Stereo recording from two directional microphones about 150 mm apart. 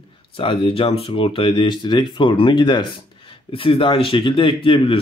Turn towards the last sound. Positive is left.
turn(degrees=35)  # may be behind; listen again after turning